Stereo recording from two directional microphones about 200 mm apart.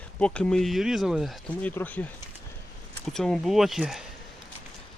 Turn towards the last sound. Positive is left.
turn(degrees=0)  # may be behind; listen again after turning